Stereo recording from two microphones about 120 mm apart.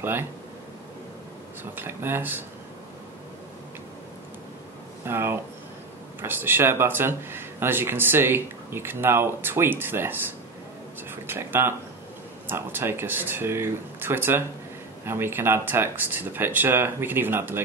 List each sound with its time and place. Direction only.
1.6 s speech: 15° right (ahead or behind)
5.0 s speech: 20° right (ahead or behind)